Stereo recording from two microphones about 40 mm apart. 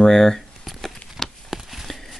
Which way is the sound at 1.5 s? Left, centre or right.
Centre.